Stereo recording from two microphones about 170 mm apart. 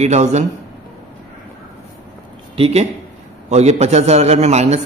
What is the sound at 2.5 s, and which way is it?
A man's voice, 35° right (ahead or behind).